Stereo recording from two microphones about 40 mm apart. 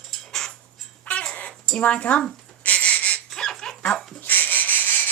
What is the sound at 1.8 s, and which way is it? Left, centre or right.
Speech, left.